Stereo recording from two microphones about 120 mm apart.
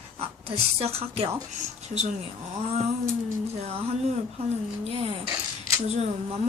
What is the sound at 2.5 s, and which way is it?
Speech, 60° right (ahead or behind).